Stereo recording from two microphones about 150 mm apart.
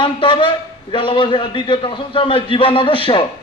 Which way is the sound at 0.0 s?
35° left (ahead or behind).